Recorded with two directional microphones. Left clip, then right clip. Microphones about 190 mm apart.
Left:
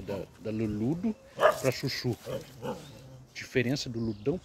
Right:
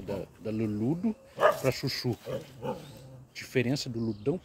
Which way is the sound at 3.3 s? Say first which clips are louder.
Even; centre (ahead or behind).